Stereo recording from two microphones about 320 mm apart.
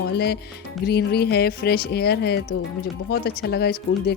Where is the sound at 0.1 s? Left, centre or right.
Left.